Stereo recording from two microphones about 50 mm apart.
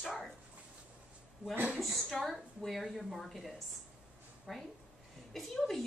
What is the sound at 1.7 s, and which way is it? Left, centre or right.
A woman's voice, centre.